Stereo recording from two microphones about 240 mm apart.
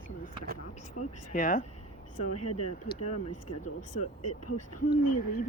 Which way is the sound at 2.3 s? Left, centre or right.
Left.